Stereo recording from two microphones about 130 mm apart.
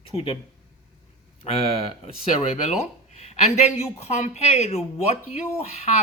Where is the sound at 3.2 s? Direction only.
55° left (ahead or behind).